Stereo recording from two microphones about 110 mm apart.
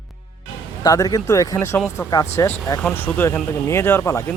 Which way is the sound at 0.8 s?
35° left (ahead or behind).